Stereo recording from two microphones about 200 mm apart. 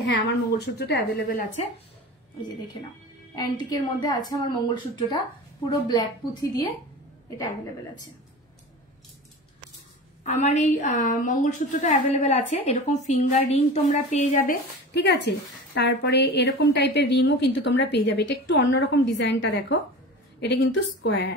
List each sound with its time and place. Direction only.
0.0 s a woman's voice: 60° left (ahead or behind)
3.3 s a woman's voice: 20° left (ahead or behind)
10.2 s a woman's voice: 35° left (ahead or behind)
14.4 s a woman's voice: 50° left (ahead or behind)